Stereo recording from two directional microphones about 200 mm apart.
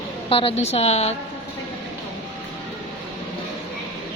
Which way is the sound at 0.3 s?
30° left (ahead or behind).